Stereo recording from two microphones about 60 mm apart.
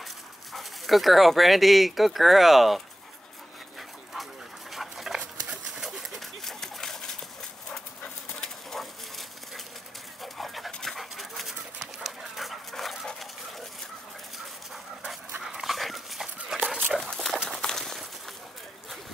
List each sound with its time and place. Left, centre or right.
0.5 s speech: centre
4.1 s dog: centre
6.4 s a sound: centre
8.0 s dog: centre
10.2 s pant: centre
10.7 s dog: centre
15.4 s dog: centre
16.6 s dog: right
17.0 s dog: centre
17.5 s a sound: centre